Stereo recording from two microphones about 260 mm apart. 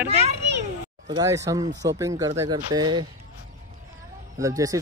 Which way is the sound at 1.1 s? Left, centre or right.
Centre.